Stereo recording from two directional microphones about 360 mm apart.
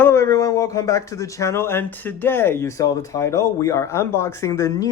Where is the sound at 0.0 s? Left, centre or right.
Centre.